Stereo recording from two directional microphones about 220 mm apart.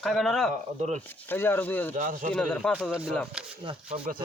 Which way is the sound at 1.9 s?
35° right (ahead or behind).